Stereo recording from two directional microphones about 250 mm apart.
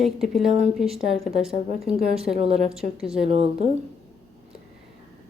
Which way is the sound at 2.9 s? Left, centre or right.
Centre.